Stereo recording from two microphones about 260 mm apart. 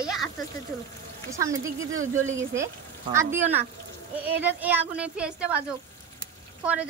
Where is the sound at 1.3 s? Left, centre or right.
Centre.